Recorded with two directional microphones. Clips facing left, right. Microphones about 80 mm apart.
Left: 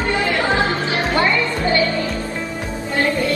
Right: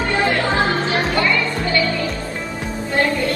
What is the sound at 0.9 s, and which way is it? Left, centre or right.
Music, left.